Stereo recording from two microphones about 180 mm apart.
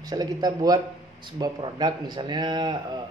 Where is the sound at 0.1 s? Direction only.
20° right (ahead or behind).